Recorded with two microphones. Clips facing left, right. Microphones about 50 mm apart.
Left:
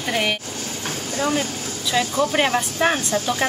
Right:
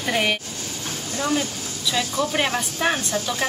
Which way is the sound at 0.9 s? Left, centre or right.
Left.